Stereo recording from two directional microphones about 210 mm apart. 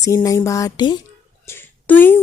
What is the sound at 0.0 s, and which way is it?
Speech, 15° left (ahead or behind).